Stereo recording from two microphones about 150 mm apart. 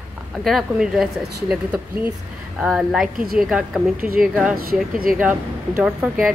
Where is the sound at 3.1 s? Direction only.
75° right (ahead or behind).